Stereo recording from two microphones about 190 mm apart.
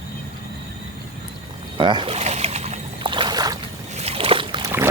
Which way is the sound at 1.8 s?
25° right (ahead or behind).